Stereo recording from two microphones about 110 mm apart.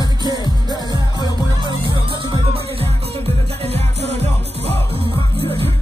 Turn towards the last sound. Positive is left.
turn(degrees=-80)